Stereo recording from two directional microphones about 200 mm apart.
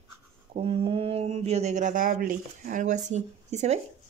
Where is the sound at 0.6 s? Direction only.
30° right (ahead or behind).